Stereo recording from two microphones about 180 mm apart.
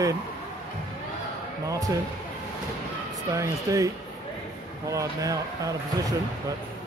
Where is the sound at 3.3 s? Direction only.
20° right (ahead or behind).